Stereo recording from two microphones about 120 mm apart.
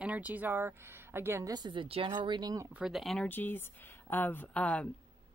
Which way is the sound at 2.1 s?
35° right (ahead or behind).